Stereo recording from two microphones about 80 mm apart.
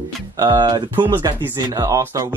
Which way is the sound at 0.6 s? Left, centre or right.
Right.